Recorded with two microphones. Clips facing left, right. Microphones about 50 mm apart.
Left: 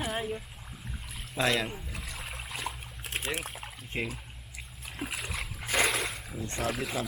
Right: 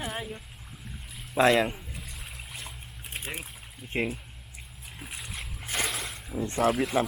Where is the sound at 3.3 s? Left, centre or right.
Left.